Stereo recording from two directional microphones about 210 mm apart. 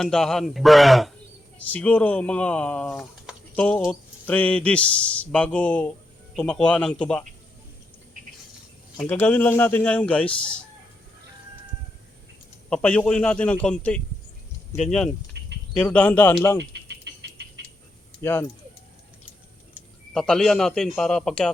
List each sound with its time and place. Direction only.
0.0 s speech: centre (ahead or behind)
9.0 s speech: 5° left (ahead or behind)
12.7 s speech: 5° left (ahead or behind)
15.3 s bird: 55° right (ahead or behind)
15.7 s speech: 5° left (ahead or behind)
16.7 s a sound: 55° right (ahead or behind)
18.2 s speech: 10° left (ahead or behind)
20.1 s speech: 5° left (ahead or behind)